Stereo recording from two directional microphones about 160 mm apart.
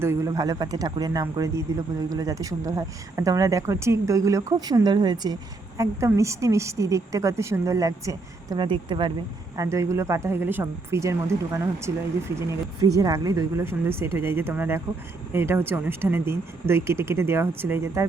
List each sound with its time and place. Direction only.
0.0 s speech: 20° right (ahead or behind)
9.6 s speech: 20° right (ahead or behind)